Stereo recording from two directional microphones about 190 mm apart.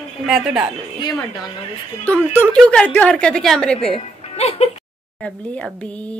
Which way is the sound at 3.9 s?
30° left (ahead or behind).